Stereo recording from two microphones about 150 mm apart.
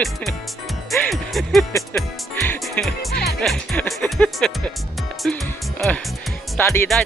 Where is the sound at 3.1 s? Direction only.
90° left.